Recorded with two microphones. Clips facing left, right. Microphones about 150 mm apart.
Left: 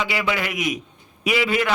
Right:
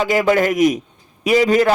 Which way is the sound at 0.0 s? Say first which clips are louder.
Right 9 dB; 45° right (ahead or behind).